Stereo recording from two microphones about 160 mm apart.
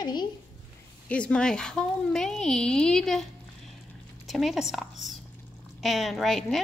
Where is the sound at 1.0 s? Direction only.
5° left (ahead or behind).